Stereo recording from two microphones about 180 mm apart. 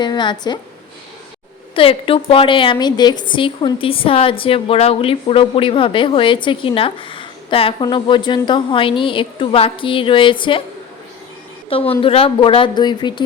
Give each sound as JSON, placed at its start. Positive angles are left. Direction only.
{"t": 0.0, "sound": "a woman's voice", "side_deg": 25}
{"t": 1.7, "sound": "a woman's voice", "side_deg": 30}
{"t": 11.7, "sound": "a woman's voice", "side_deg": 30}